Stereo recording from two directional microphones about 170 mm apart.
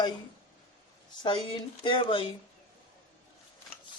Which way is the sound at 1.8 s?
30° left (ahead or behind).